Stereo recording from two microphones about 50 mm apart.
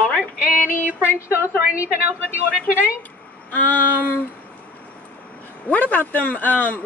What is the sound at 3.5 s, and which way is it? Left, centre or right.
Speech, left.